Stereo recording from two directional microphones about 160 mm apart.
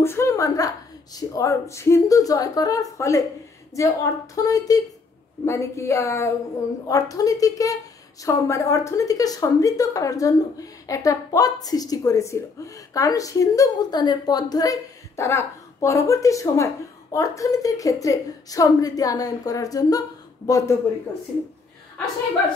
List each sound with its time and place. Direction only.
0.0 s a woman's voice: 15° left (ahead or behind)